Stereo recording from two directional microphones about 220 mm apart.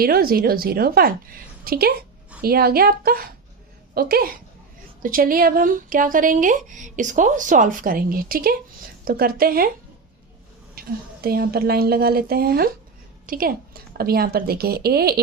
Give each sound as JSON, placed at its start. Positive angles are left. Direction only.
{"t": 0.0, "sound": "a woman's voice", "side_deg": -45}
{"t": 10.8, "sound": "a woman's voice", "side_deg": -45}